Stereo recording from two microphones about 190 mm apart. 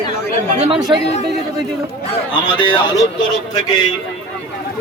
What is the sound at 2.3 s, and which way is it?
Speech, 25° left (ahead or behind).